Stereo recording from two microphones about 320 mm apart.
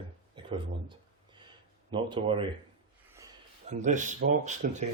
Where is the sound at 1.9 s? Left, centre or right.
Centre.